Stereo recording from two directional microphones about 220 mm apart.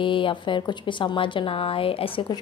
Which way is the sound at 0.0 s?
20° left (ahead or behind).